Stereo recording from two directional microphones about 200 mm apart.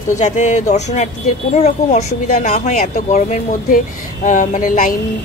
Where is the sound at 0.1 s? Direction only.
35° left (ahead or behind).